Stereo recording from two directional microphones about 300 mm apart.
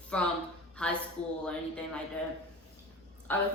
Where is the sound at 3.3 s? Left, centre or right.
Centre.